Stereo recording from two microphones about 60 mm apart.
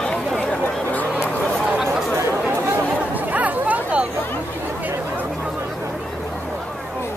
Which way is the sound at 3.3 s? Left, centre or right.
Right.